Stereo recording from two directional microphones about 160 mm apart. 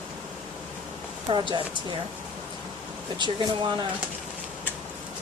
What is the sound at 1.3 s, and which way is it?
Speech, 30° right (ahead or behind).